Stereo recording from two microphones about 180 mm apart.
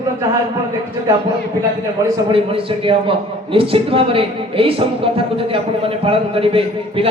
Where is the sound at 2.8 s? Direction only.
30° right (ahead or behind).